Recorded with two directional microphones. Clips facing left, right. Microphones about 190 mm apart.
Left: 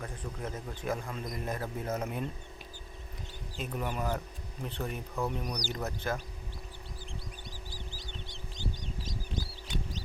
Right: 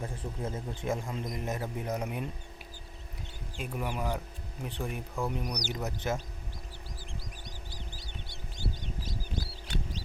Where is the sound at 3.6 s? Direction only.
10° right (ahead or behind).